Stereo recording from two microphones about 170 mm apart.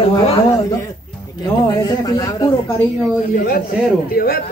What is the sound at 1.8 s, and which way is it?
Speech, 20° left (ahead or behind).